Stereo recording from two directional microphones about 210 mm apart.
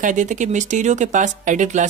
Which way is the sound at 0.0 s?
35° right (ahead or behind).